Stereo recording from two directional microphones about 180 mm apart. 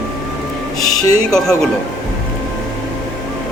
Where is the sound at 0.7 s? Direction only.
Centre (ahead or behind).